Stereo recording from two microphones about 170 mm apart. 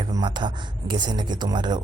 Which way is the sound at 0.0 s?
25° right (ahead or behind).